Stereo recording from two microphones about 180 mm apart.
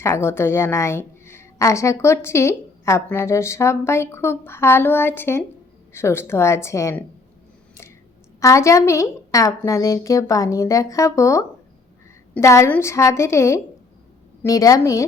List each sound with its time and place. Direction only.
0.0 s a woman's voice: 15° left (ahead or behind)
8.4 s a woman's voice: 15° left (ahead or behind)